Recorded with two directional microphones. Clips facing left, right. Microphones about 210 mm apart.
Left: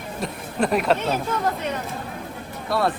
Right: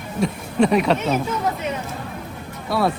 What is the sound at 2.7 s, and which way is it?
Speech, centre (ahead or behind).